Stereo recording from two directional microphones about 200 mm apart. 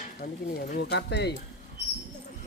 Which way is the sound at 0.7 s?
55° left (ahead or behind).